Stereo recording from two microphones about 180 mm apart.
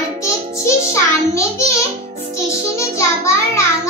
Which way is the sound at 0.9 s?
15° left (ahead or behind).